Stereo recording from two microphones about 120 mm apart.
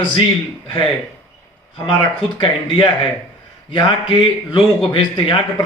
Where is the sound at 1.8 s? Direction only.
35° left (ahead or behind).